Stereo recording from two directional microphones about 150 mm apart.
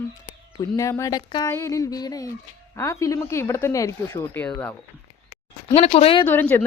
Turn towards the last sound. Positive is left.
turn(degrees=15)  # may be behind; listen again after turning